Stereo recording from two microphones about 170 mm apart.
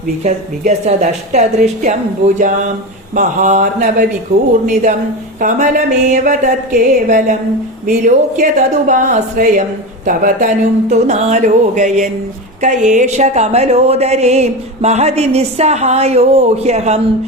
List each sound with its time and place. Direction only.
0.3 s a woman's voice: 45° right (ahead or behind)